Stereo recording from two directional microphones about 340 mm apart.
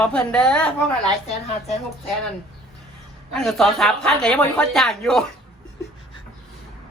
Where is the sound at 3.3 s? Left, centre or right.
Centre.